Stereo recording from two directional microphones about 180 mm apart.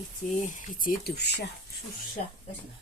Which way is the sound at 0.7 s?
55° left (ahead or behind).